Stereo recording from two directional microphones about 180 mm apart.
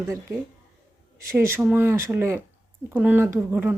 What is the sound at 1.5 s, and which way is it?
Speech, 10° right (ahead or behind).